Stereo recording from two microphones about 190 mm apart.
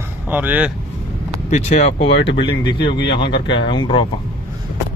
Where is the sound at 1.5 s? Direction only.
35° left (ahead or behind).